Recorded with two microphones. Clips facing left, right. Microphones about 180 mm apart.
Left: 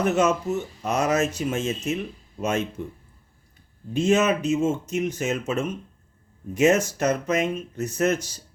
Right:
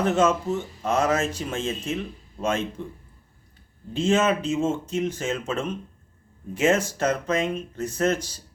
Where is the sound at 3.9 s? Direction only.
15° left (ahead or behind).